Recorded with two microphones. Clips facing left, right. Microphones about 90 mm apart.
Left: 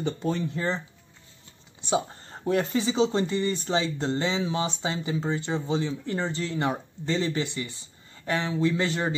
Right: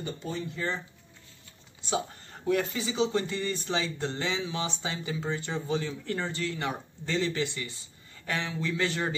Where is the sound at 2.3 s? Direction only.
30° left (ahead or behind).